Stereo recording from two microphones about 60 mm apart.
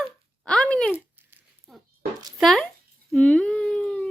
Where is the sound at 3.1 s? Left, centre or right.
Centre.